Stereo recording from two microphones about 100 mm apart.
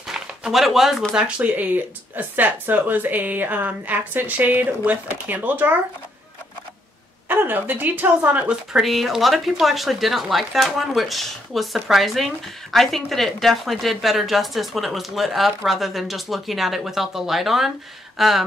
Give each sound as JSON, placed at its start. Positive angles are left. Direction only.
{"t": 0.0, "sound": "a sound", "side_deg": -5}
{"t": 1.1, "sound": "speech", "side_deg": -10}
{"t": 7.2, "sound": "a woman's voice", "side_deg": -20}